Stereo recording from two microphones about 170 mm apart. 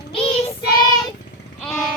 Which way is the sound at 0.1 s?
35° left (ahead or behind).